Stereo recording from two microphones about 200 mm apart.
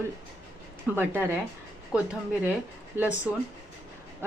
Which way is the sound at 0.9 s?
10° right (ahead or behind).